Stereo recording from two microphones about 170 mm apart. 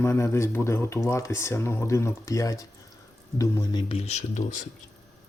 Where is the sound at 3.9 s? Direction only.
40° left (ahead or behind).